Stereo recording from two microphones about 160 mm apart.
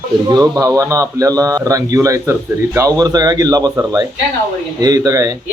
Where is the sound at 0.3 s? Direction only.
25° right (ahead or behind).